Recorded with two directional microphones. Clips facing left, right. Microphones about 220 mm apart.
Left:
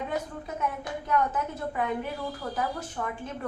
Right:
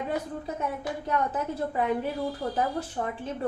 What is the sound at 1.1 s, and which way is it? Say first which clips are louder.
Speech: left 1 dB; 30° right (ahead or behind).